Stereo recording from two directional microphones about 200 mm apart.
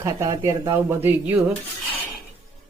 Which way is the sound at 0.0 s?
15° right (ahead or behind).